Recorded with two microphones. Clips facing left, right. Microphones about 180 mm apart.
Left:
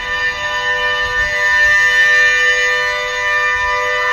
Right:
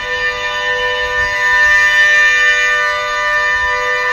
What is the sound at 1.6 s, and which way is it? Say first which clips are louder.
Music: right 1 dB; 40° left (ahead or behind).